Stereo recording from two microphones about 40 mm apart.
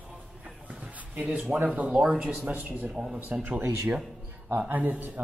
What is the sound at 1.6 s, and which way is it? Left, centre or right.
Speech, right.